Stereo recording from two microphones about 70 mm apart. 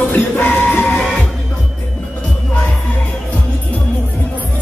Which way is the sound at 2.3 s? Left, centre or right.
Centre.